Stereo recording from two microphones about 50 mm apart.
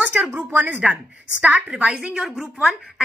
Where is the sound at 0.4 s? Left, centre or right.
Right.